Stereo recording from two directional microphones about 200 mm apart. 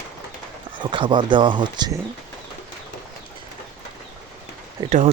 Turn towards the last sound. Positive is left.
turn(degrees=-35)  # may be behind; listen again after turning